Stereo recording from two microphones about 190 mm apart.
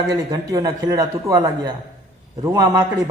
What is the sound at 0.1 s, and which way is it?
A man's voice, 20° right (ahead or behind).